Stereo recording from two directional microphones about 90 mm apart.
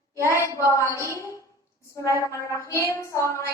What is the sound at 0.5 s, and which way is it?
A woman's voice, 35° left (ahead or behind).